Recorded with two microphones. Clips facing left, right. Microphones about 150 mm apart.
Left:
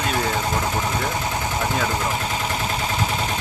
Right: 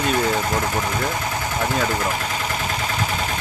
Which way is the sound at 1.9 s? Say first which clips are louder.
Right 1 dB; 20° left (ahead or behind).